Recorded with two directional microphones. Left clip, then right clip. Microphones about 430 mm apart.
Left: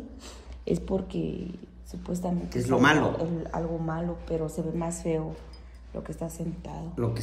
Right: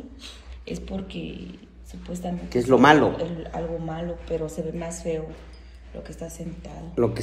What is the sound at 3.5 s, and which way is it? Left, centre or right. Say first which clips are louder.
A woman's voice: right 2 dB; centre.